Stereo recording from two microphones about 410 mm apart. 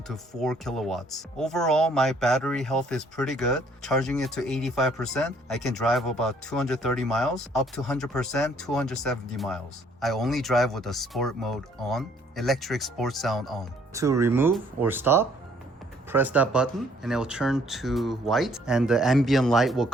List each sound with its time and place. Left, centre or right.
0.1 s speech: centre